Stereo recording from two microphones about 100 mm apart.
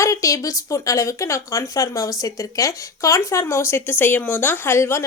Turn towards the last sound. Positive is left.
turn(degrees=25)  # may be behind; listen again after turning